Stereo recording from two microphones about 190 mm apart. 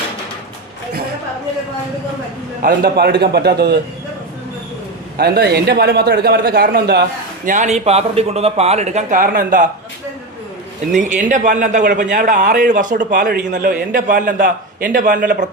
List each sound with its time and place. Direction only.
2.6 s a man's voice: 50° right (ahead or behind)
5.1 s a man's voice: 55° right (ahead or behind)
7.4 s speech: 40° right (ahead or behind)
10.9 s a man's voice: 40° right (ahead or behind)